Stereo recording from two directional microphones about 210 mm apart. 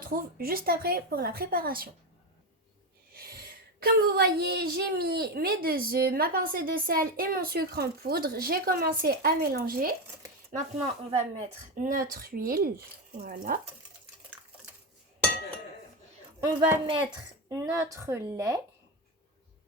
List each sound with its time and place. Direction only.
0.1 s a woman's voice: 45° right (ahead or behind)
3.2 s a woman's voice: 45° right (ahead or behind)
11.1 s a woman's voice: 30° right (ahead or behind)
16.4 s speech: 20° right (ahead or behind)